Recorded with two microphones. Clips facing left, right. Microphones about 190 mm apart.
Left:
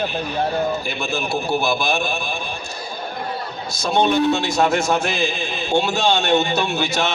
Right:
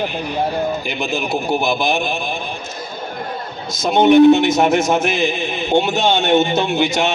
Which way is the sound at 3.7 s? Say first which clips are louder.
Right 7 dB; 20° right (ahead or behind).